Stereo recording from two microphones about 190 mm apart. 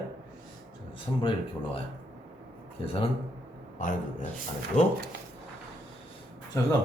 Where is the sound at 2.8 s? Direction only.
30° left (ahead or behind).